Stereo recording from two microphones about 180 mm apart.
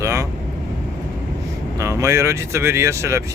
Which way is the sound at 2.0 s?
15° right (ahead or behind).